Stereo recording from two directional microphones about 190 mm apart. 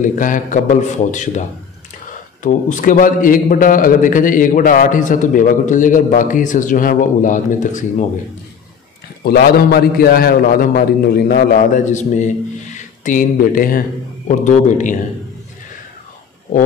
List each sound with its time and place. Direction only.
0.0 s a man's voice: 45° left (ahead or behind)
2.4 s a man's voice: 45° left (ahead or behind)
9.2 s a man's voice: 55° left (ahead or behind)